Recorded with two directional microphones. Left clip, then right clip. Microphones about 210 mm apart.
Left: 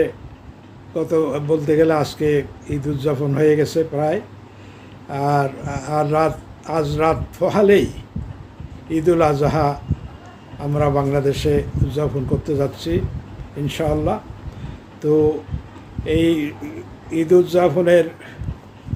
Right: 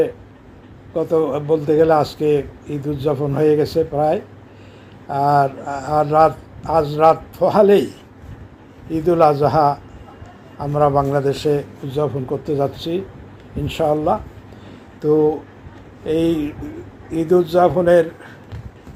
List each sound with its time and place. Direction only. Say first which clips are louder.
0.9 s a man's voice: right 1 dB; centre (ahead or behind)
8.9 s a man's voice: right 2 dB; centre (ahead or behind)
17.5 s a man's voice: right 1 dB; centre (ahead or behind)